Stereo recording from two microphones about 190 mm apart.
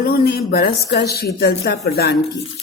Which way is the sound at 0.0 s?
55° left (ahead or behind).